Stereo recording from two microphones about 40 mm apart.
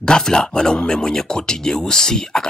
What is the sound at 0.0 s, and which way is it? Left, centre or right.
Speech, centre.